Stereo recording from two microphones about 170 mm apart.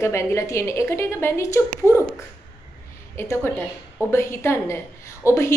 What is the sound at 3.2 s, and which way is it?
A woman's voice, 15° left (ahead or behind).